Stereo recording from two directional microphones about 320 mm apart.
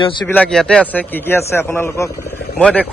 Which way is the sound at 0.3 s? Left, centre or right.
Centre.